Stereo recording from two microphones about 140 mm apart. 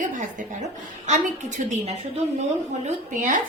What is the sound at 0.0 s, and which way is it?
A woman's voice, 65° right (ahead or behind).